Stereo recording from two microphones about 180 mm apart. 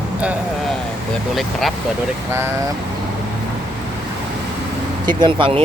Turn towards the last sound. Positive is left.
turn(degrees=-30)  # may be behind; listen again after turning